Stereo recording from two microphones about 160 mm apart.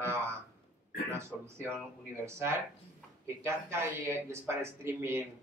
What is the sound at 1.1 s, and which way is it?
Speech, 15° right (ahead or behind).